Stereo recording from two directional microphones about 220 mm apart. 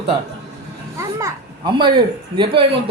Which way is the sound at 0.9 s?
15° right (ahead or behind).